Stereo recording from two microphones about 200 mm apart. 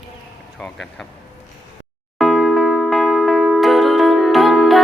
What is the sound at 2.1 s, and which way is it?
Music, centre (ahead or behind).